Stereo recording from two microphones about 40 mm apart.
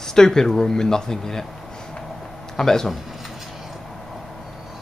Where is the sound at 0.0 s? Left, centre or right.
Centre.